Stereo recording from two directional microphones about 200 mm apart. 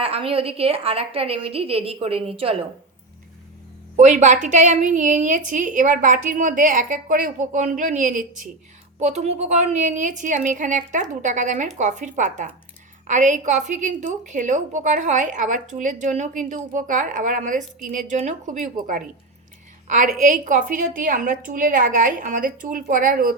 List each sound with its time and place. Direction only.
0.0 s a woman's voice: 30° right (ahead or behind)
3.9 s a woman's voice: 35° right (ahead or behind)